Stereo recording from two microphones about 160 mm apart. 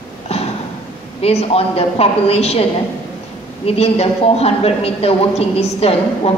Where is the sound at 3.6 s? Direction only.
40° left (ahead or behind).